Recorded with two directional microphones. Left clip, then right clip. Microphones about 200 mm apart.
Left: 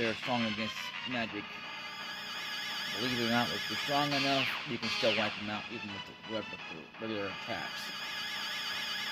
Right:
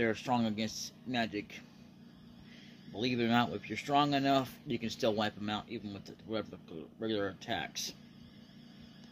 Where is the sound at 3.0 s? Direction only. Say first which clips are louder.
Right 1 dB; 5° right (ahead or behind).